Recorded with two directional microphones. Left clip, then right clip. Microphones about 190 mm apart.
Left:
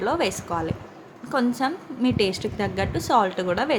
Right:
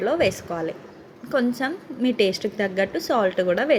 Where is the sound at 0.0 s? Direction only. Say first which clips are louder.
Right 3 dB; centre (ahead or behind).